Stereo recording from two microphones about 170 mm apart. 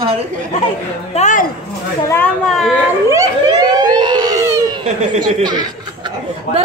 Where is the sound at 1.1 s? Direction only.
45° left (ahead or behind).